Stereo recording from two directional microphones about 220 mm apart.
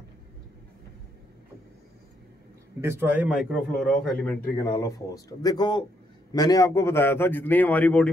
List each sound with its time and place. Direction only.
2.8 s a man's voice: 10° right (ahead or behind)
4.6 s a man's voice: 15° left (ahead or behind)